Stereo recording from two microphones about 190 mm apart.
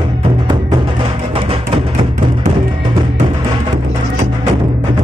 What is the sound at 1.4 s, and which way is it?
Music, 30° right (ahead or behind).